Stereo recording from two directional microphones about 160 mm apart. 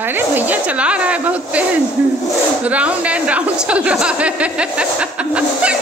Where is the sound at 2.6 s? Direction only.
10° right (ahead or behind).